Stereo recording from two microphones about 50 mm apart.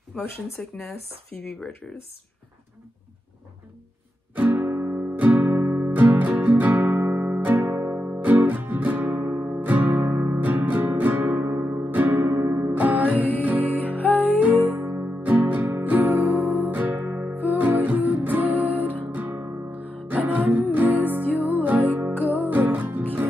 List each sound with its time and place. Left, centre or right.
0.6 s speech: left
1.3 s speech: centre
4.4 s music: right
5.1 s music: right
5.6 s music: right
5.9 s music: right
12.4 s music: right
12.7 s music: right
13.9 s music: left
14.4 s music: right
15.2 s music: right